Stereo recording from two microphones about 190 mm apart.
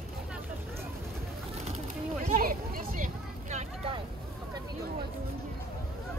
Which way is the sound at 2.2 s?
50° right (ahead or behind).